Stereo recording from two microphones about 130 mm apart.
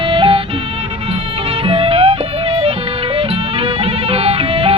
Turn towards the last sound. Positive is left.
turn(degrees=-45)  # may be behind; listen again after turning